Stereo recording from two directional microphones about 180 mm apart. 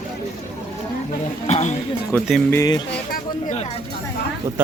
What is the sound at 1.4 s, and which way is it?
Speech, 40° left (ahead or behind).